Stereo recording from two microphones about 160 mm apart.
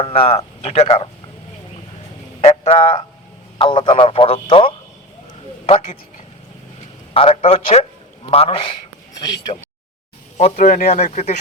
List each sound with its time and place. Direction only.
0.0 s speech: 35° left (ahead or behind)
2.4 s speech: 40° left (ahead or behind)
7.1 s a man's voice: 35° left (ahead or behind)
10.3 s speech: 45° left (ahead or behind)
10.7 s speech: 65° left (ahead or behind)
11.0 s speech: 45° left (ahead or behind)